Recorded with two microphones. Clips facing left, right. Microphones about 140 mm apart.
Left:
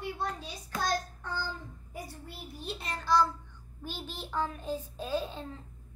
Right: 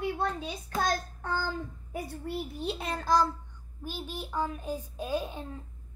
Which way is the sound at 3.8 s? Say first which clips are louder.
Right 3 dB; 10° right (ahead or behind).